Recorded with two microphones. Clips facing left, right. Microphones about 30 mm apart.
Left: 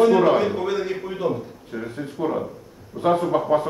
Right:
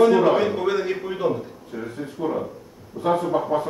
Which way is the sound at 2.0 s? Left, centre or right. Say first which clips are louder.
Left 1 dB; centre.